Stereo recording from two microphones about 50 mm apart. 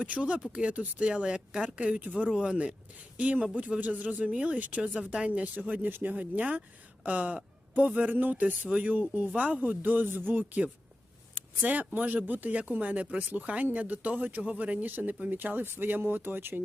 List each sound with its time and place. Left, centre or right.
0.0 s speech: right
5.5 s speech: right
11.3 s a sound: right
11.9 s speech: right